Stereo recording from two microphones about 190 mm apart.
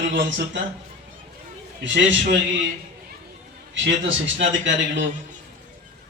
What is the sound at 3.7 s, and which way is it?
A man's voice, 80° right.